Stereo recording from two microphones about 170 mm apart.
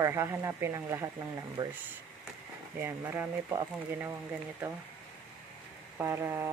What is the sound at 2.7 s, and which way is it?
Speech, 10° right (ahead or behind).